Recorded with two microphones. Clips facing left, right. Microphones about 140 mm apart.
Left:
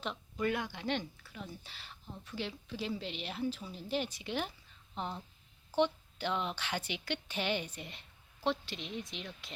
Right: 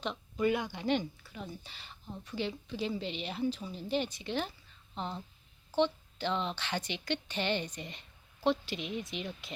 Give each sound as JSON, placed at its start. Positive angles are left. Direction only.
{"t": 0.3, "sound": "a woman's voice", "side_deg": -5}